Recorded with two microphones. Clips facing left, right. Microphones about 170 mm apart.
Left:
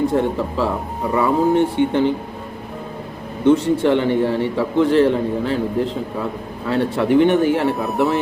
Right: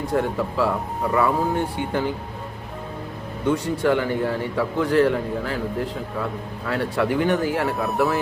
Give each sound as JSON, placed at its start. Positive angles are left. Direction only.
{"t": 0.1, "sound": "a man's voice", "side_deg": 25}
{"t": 3.4, "sound": "a man's voice", "side_deg": 25}